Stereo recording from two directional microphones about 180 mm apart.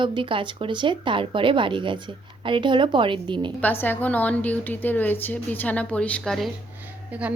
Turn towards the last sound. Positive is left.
turn(degrees=-10)  # may be behind; listen again after turning